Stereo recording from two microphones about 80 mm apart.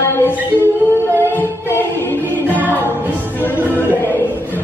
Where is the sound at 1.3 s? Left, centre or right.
Left.